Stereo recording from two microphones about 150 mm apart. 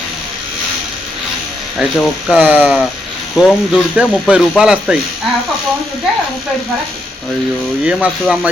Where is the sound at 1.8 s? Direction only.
5° right (ahead or behind).